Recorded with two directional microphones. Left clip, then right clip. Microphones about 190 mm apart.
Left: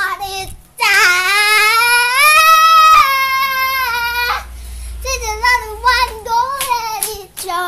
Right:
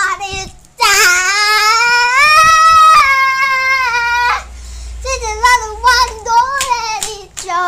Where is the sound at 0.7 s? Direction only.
15° right (ahead or behind).